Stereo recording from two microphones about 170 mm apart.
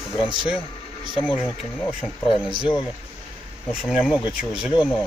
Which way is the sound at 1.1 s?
30° left (ahead or behind).